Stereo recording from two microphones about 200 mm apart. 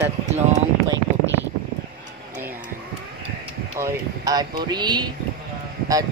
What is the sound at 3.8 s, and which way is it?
Speech, 20° right (ahead or behind).